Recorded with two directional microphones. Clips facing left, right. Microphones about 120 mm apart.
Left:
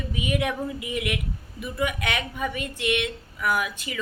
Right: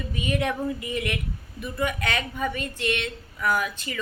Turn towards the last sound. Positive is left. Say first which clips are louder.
# right 1 dB
turn(degrees=10)  # may be behind; listen again after turning